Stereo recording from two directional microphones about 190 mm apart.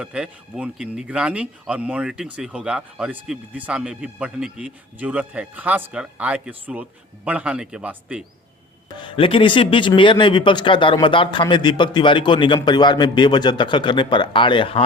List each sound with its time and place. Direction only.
0.0 s speech: 5° right (ahead or behind)
9.0 s speech: 25° left (ahead or behind)